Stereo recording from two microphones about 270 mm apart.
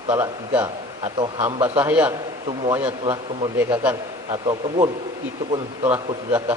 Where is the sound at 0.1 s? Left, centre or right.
Centre.